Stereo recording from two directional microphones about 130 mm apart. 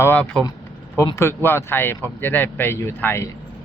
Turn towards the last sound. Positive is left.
turn(degrees=20)  # may be behind; listen again after turning